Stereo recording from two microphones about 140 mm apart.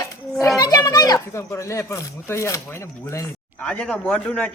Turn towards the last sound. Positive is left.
turn(degrees=10)  # may be behind; listen again after turning